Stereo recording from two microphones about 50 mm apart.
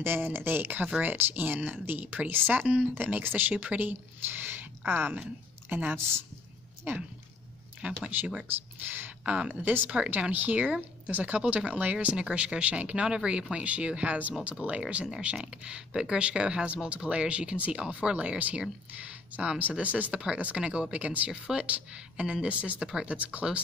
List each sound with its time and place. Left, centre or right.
0.0 s a woman's voice: right
5.9 s a woman's voice: right
6.9 s speech: right
7.8 s speech: right
8.5 s speech: right
9.2 s speech: right
10.3 s speech: right
15.0 s speech: centre
21.3 s speech: centre
21.6 s speech: right